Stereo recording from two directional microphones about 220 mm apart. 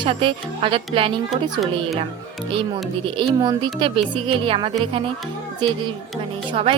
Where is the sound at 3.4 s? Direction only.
20° right (ahead or behind).